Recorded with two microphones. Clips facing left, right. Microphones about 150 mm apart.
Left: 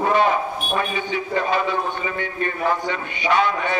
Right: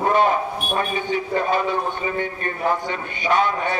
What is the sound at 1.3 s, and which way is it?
Speech, 45° right (ahead or behind).